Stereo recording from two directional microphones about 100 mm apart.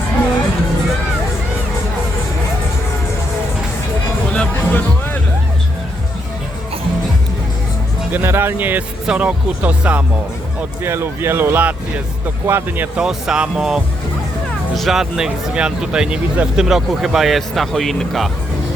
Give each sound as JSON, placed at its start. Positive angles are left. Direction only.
{"t": 4.3, "sound": "music", "side_deg": 15}
{"t": 8.1, "sound": "speech", "side_deg": -20}
{"t": 13.0, "sound": "speech", "side_deg": -5}